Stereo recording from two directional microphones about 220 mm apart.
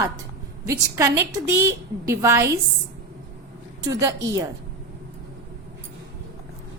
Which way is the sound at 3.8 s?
15° right (ahead or behind).